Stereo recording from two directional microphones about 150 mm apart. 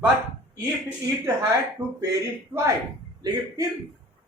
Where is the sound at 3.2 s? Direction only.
25° right (ahead or behind).